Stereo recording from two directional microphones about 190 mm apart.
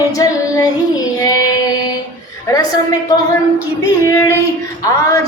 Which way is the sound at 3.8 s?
15° left (ahead or behind).